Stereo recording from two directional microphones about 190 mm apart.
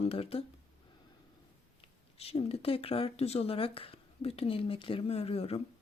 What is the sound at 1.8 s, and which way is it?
Speech, 30° left (ahead or behind).